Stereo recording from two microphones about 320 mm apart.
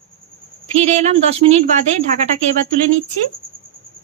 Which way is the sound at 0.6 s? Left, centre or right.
Right.